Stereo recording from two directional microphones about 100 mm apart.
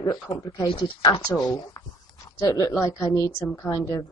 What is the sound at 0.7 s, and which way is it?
Speech, 60° left (ahead or behind).